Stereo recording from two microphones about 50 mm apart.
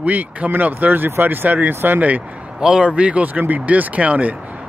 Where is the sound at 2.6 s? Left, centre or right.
Centre.